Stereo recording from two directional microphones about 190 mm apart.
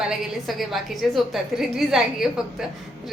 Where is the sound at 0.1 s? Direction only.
Centre (ahead or behind).